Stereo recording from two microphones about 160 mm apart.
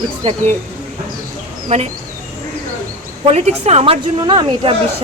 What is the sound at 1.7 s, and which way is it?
Speech, 45° right (ahead or behind).